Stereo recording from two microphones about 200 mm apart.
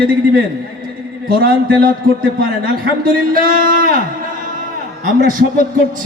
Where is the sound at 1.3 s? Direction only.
50° right (ahead or behind).